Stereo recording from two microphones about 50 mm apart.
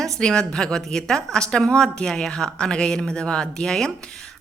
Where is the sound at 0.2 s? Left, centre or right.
Centre.